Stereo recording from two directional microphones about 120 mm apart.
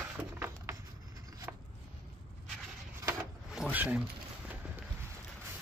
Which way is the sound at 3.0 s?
20° right (ahead or behind).